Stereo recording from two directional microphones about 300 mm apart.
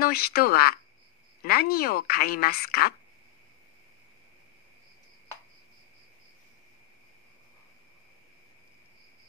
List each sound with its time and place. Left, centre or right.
0.0 s a woman's voice: left